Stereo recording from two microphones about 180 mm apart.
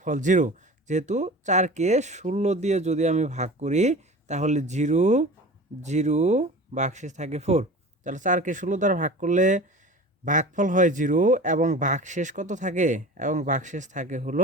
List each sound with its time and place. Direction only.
0.0 s a man's voice: 45° right (ahead or behind)